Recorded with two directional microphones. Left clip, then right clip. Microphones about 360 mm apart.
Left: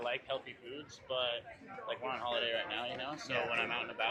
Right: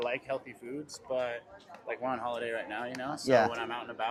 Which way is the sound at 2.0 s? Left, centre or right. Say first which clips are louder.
Right 2 dB; right.